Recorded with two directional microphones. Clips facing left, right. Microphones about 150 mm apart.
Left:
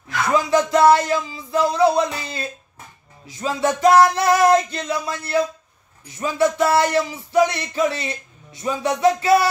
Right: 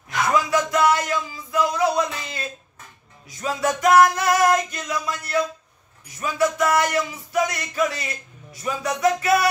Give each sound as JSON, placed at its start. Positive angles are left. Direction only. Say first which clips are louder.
{"t": 0.3, "sound": "music", "louder": "left 4 dB", "side_deg": 30}
{"t": 3.3, "sound": "speech", "louder": "left 2 dB", "side_deg": 30}